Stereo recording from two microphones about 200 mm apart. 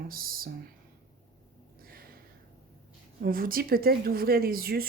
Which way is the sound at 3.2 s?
45° right (ahead or behind).